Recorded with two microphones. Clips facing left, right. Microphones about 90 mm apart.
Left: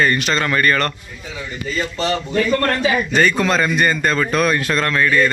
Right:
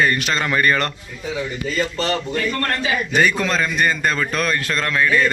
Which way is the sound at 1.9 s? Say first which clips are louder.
Left 1 dB; 5° left (ahead or behind).